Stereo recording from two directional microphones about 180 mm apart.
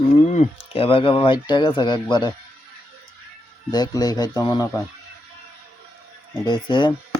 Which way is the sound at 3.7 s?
20° left (ahead or behind).